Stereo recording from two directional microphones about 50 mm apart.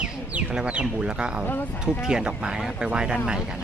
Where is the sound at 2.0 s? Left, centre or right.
Centre.